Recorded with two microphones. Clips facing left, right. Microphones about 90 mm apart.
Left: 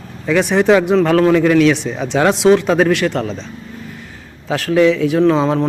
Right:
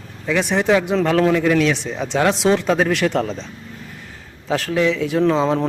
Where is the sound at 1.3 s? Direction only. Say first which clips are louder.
Left 5 dB; 60° left (ahead or behind).